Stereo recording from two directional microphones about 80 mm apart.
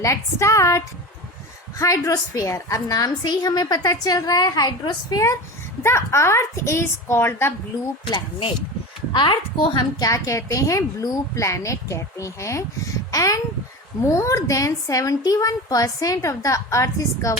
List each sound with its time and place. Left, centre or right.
0.0 s a woman's voice: left
1.8 s a woman's voice: left
5.8 s a woman's voice: left
9.1 s a woman's voice: left
10.0 s a woman's voice: left